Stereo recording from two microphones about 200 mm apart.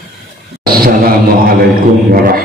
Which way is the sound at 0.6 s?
45° right (ahead or behind).